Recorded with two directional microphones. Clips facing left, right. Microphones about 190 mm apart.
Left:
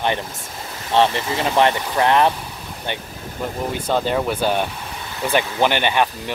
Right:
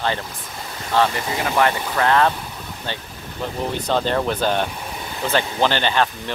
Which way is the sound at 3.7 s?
10° left (ahead or behind).